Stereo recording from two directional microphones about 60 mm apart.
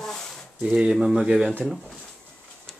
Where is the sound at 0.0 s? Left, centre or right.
Centre.